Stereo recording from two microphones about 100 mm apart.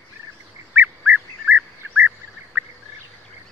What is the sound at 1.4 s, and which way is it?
Duck, 15° right (ahead or behind).